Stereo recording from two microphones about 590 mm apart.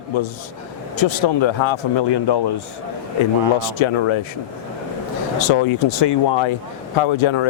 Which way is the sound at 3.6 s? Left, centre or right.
Left.